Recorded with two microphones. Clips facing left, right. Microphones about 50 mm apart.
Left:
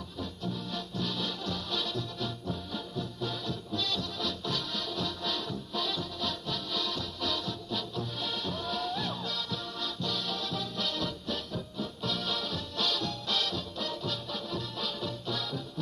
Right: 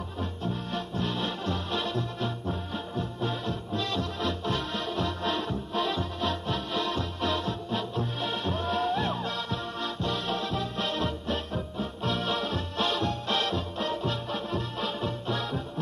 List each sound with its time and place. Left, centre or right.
0.2 s music: right